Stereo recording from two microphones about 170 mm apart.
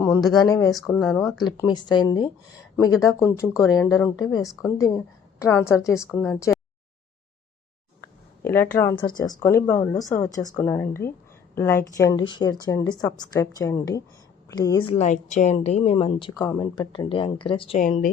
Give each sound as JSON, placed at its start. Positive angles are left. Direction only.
{"t": 0.0, "sound": "a sound", "side_deg": 15}
{"t": 0.3, "sound": "speech", "side_deg": 20}
{"t": 0.9, "sound": "speech", "side_deg": 5}
{"t": 1.5, "sound": "speech", "side_deg": 25}
{"t": 8.4, "sound": "speech", "side_deg": 15}
{"t": 14.8, "sound": "a woman's voice", "side_deg": 40}
{"t": 17.7, "sound": "speech", "side_deg": 50}